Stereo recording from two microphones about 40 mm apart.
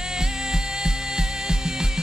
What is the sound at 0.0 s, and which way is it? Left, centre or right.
Music, centre.